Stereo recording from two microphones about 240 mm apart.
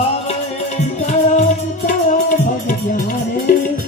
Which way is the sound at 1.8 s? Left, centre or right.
Left.